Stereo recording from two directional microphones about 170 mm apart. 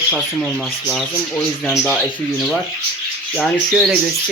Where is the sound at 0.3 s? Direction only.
5° left (ahead or behind).